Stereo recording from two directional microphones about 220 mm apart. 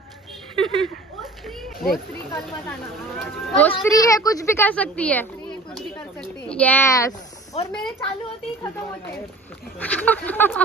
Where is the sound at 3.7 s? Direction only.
15° left (ahead or behind).